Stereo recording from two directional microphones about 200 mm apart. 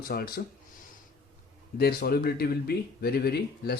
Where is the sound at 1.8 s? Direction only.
50° left (ahead or behind).